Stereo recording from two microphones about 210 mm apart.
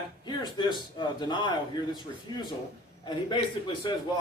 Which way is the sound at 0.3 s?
20° left (ahead or behind).